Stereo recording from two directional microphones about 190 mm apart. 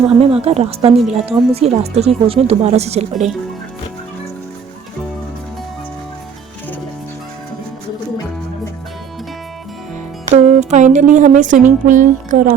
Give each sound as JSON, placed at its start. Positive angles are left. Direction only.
{"t": 0.1, "sound": "speech", "side_deg": -30}
{"t": 10.3, "sound": "speech", "side_deg": -40}